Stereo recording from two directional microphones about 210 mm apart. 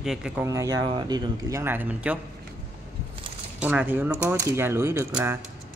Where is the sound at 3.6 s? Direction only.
10° right (ahead or behind).